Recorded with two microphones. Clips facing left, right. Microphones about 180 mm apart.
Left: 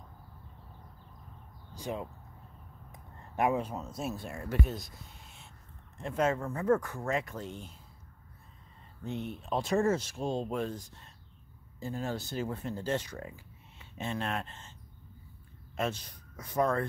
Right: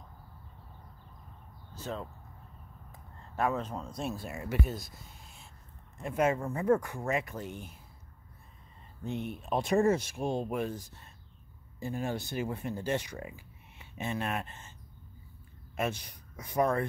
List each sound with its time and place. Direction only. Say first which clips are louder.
1.7 s a sound: left 1 dB; 15° left (ahead or behind)
2.9 s speech: left 1 dB; 15° left (ahead or behind); by 5.5 s centre (ahead or behind)
6.0 s speech: right 1 dB; 10° right (ahead or behind)
9.0 s speech: right 1 dB; 15° right (ahead or behind)
15.7 s speech: even; 10° right (ahead or behind)